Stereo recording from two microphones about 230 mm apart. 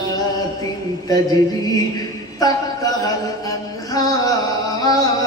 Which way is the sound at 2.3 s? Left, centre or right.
Centre.